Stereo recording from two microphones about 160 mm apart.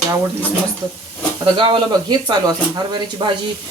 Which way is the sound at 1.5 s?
30° right (ahead or behind).